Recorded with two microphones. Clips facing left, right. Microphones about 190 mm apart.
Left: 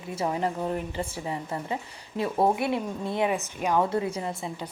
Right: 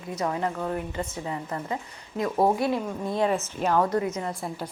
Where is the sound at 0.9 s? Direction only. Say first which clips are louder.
Even; 30° left (ahead or behind).